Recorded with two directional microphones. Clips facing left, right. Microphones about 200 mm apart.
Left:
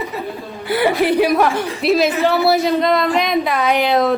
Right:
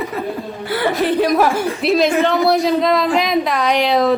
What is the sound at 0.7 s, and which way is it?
Speech, 15° left (ahead or behind).